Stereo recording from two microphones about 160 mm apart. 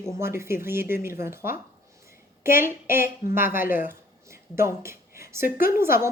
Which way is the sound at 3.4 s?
15° right (ahead or behind).